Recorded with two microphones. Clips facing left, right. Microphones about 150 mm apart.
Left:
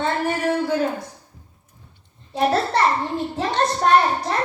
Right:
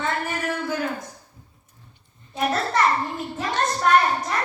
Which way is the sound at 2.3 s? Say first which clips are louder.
Left 4 dB; 30° left (ahead or behind).